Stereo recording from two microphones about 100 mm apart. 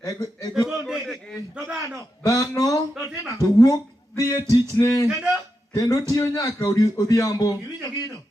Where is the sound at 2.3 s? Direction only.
35° left (ahead or behind).